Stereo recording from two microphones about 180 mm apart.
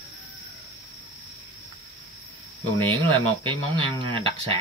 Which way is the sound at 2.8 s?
30° right (ahead or behind).